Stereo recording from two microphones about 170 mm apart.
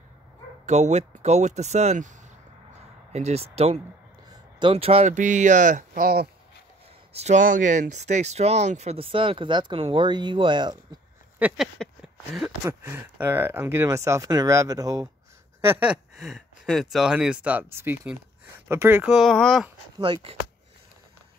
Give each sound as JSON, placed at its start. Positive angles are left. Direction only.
{"t": 0.7, "sound": "speech", "side_deg": -40}
{"t": 7.2, "sound": "speech", "side_deg": -45}
{"t": 11.3, "sound": "a sound", "side_deg": -5}
{"t": 12.6, "sound": "speech", "side_deg": -15}
{"t": 15.7, "sound": "speech", "side_deg": -10}
{"t": 19.1, "sound": "a sound", "side_deg": 0}
{"t": 20.0, "sound": "speech", "side_deg": -30}